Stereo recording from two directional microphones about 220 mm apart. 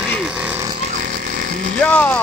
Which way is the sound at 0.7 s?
35° right (ahead or behind).